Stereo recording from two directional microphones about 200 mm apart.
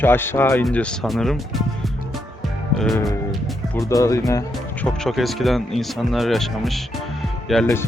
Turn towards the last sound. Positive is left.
turn(degrees=0)  # may be behind; listen again after turning